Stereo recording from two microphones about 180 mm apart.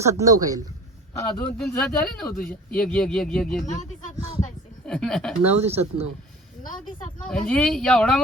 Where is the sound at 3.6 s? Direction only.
45° left (ahead or behind).